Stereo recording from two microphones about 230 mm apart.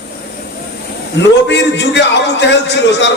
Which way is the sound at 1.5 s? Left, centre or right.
Left.